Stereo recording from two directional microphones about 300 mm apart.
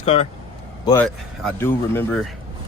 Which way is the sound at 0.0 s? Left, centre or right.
Centre.